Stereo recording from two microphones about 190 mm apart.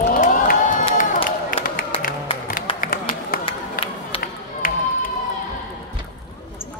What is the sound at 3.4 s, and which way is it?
Run, 30° left (ahead or behind).